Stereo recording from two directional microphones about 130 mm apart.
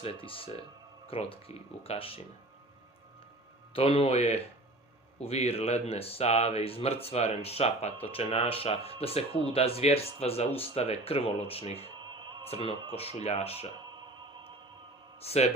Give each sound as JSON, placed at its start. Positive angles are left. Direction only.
{"t": 0.0, "sound": "speech", "side_deg": 45}
{"t": 3.8, "sound": "speech", "side_deg": 45}
{"t": 15.2, "sound": "a man's voice", "side_deg": 50}